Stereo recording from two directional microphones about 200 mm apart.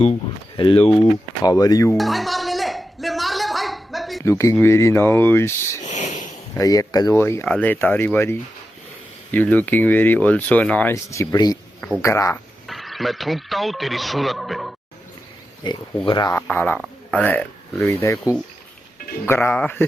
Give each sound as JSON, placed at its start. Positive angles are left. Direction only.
{"t": 0.0, "sound": "speech", "side_deg": 30}
{"t": 2.0, "sound": "a sound", "side_deg": 0}
{"t": 4.2, "sound": "speech", "side_deg": 15}
{"t": 5.8, "sound": "a sound", "side_deg": 35}
{"t": 6.6, "sound": "speech", "side_deg": 15}
{"t": 12.6, "sound": "speech", "side_deg": 0}
{"t": 15.6, "sound": "speech", "side_deg": 25}
{"t": 16.5, "sound": "speech", "side_deg": 5}
{"t": 19.2, "sound": "speech", "side_deg": 10}